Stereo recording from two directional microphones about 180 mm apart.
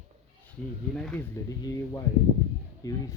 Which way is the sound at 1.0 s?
5° left (ahead or behind).